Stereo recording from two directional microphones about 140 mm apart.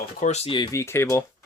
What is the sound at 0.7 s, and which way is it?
Speech, 15° left (ahead or behind).